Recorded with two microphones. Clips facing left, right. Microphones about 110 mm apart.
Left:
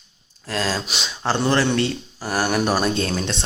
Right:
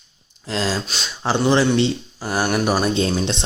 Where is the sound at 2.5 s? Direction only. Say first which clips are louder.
Right 1 dB; centre (ahead or behind).